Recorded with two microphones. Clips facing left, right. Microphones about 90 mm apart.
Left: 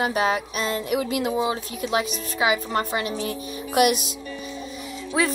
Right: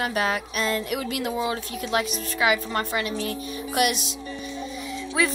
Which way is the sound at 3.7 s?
45° left (ahead or behind).